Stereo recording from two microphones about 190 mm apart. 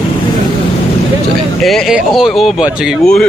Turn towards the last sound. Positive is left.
turn(degrees=0)  # may be behind; listen again after turning